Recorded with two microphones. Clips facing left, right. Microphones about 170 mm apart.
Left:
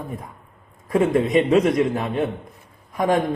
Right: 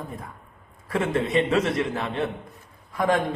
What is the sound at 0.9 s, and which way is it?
A man's voice, 15° left (ahead or behind).